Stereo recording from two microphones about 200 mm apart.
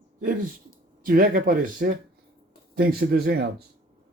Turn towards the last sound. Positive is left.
turn(degrees=-50)  # may be behind; listen again after turning